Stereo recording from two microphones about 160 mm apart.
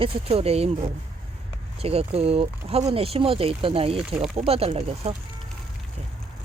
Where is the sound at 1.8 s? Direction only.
40° right (ahead or behind).